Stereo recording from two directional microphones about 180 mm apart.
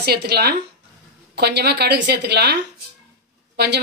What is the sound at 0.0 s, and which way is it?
A woman's voice, 60° right (ahead or behind).